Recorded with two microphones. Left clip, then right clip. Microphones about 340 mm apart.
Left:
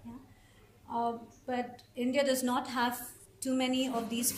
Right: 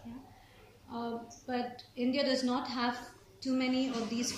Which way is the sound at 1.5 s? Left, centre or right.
Left.